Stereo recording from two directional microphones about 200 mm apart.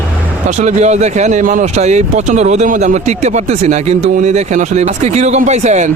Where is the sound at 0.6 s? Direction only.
35° right (ahead or behind).